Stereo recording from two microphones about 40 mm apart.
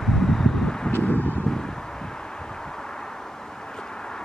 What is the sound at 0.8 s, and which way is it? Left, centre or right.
Vehicle, left.